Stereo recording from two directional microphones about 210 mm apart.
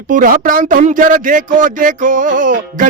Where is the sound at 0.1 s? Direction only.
40° right (ahead or behind).